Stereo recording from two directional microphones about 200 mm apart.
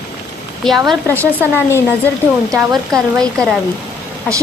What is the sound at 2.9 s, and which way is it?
Speech, centre (ahead or behind).